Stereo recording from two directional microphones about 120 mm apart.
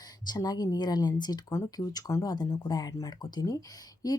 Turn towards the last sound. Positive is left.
turn(degrees=30)  # may be behind; listen again after turning